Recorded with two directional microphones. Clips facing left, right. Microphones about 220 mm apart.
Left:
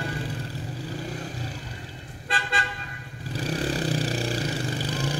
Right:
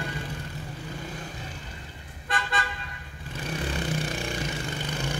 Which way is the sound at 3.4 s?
35° left (ahead or behind).